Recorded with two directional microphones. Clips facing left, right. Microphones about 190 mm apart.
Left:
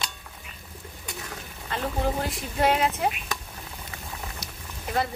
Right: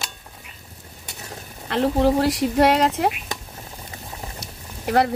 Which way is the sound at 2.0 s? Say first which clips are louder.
Right 10 dB; 80° right.